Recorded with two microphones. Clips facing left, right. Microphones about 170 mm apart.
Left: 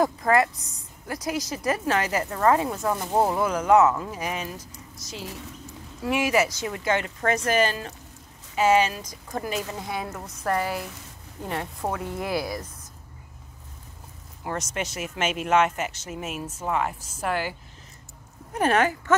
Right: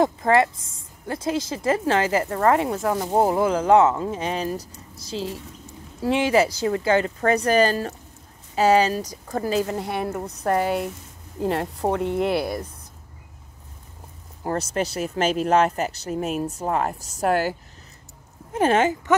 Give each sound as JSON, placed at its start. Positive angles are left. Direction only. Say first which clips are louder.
{"t": 0.0, "sound": "a woman's voice", "louder": "right 3 dB", "side_deg": -25}
{"t": 9.8, "sound": "speech", "louder": "right 5 dB", "side_deg": -65}
{"t": 10.2, "sound": "speech", "louder": "right 3 dB", "side_deg": -30}
{"t": 14.4, "sound": "speech", "louder": "right 6 dB", "side_deg": -35}
{"t": 18.5, "sound": "a woman's voice", "louder": "right 3 dB", "side_deg": -25}